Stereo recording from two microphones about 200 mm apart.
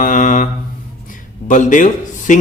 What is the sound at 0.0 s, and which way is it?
Mantra, 40° left (ahead or behind).